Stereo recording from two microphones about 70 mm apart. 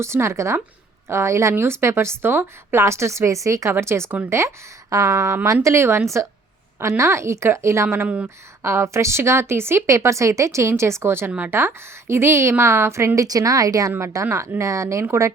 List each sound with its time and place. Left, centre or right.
0.0 s speech: right
2.8 s speech: right
8.0 s speech: right
8.6 s speech: right
11.3 s speech: right
11.5 s speech: right
13.1 s a woman's voice: right
14.0 s speech: right